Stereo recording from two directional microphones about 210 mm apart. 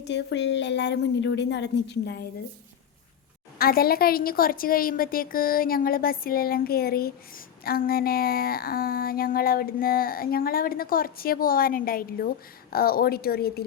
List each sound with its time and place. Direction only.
0.0 s a woman's voice: 55° left (ahead or behind)
3.6 s a woman's voice: 45° left (ahead or behind)